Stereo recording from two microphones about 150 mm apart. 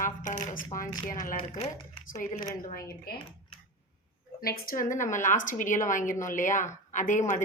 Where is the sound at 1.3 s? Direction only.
35° left (ahead or behind).